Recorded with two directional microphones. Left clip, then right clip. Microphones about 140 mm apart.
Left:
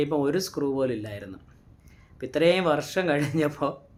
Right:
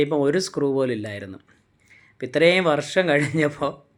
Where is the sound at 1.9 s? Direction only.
25° right (ahead or behind).